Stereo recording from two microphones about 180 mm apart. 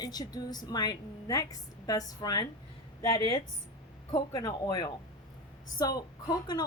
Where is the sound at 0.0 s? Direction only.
20° left (ahead or behind).